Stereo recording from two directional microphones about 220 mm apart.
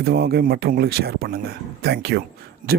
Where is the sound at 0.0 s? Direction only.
45° right (ahead or behind).